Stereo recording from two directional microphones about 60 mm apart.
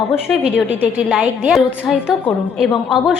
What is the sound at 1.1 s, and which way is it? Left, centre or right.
A woman's voice, centre.